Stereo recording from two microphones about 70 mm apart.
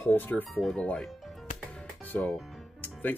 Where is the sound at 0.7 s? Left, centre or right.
Centre.